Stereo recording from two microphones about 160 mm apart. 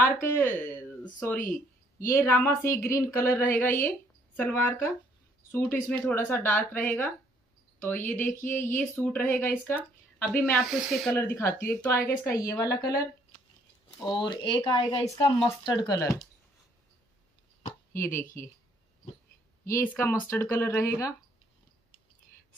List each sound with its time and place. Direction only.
0.0 s speech: 15° left (ahead or behind)
1.4 s a sound: 55° left (ahead or behind)
2.0 s speech: 20° left (ahead or behind); by 11.1 s centre (ahead or behind)
11.1 s a woman's voice: 15° left (ahead or behind)
14.2 s a woman's voice: 30° left (ahead or behind)
17.9 s speech: 15° left (ahead or behind)
19.6 s speech: 15° left (ahead or behind)